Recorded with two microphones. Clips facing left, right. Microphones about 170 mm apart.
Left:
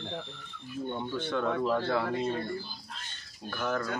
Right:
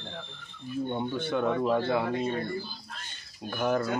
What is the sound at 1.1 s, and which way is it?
Speech, 10° right (ahead or behind).